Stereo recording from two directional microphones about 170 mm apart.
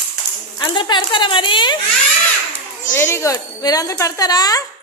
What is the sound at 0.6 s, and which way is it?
A woman's voice, 25° left (ahead or behind).